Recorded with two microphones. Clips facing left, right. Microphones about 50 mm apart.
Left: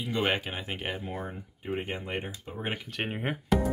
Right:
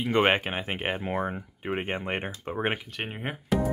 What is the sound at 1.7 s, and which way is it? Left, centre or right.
Speech, right.